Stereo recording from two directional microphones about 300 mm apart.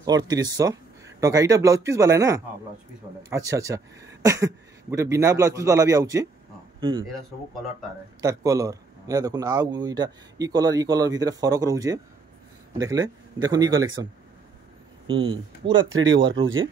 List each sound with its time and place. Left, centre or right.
0.0 s a man's voice: centre
8.2 s a man's voice: centre
15.0 s a man's voice: centre
15.7 s speech: right